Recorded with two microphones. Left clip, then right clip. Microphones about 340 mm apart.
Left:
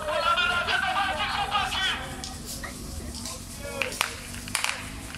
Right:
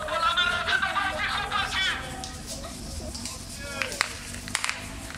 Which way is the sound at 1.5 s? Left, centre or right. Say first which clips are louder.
Even; centre.